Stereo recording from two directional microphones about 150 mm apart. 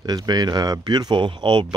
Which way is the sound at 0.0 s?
25° right (ahead or behind).